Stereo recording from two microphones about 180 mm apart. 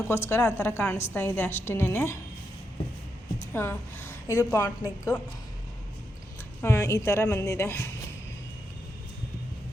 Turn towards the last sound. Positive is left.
turn(degrees=15)  # may be behind; listen again after turning